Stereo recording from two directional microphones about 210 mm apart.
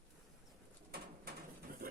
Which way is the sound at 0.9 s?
45° right (ahead or behind).